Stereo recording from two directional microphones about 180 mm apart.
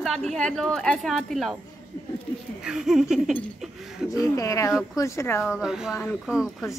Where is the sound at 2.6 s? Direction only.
5° right (ahead or behind).